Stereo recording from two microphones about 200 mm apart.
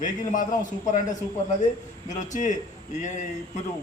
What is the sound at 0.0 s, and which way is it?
A man's voice, 40° left (ahead or behind).